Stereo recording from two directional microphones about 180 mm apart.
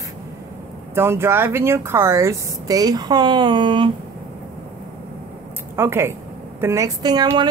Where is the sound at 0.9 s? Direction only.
15° right (ahead or behind).